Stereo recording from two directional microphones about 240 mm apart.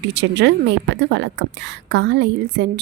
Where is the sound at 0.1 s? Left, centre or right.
Right.